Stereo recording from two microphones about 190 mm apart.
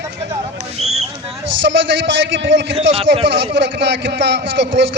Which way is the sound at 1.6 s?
70° right (ahead or behind).